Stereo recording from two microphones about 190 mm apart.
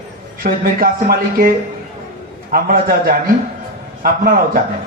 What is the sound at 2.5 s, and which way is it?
A man's voice, 50° right (ahead or behind).